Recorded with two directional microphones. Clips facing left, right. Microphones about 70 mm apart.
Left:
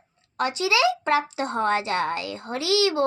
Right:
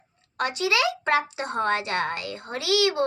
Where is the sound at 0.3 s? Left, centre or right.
Right.